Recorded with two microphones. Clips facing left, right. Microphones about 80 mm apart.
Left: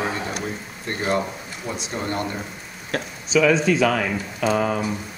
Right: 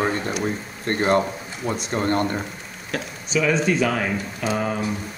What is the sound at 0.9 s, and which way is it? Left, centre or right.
Speech, right.